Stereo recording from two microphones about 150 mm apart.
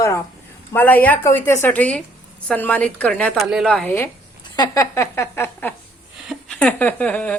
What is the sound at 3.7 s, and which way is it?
Speech, 10° left (ahead or behind).